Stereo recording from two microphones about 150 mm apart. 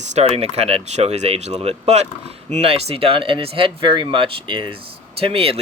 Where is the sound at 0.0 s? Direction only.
45° right (ahead or behind).